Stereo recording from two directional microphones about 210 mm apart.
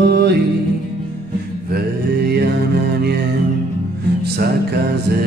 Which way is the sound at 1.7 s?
50° right (ahead or behind).